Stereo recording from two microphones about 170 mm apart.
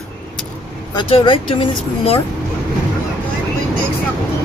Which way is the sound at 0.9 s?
30° left (ahead or behind).